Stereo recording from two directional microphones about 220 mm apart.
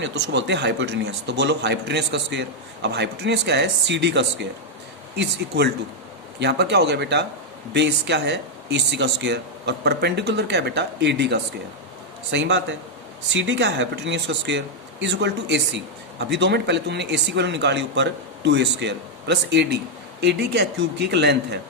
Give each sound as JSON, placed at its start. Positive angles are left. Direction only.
{"t": 0.0, "sound": "speech", "side_deg": -55}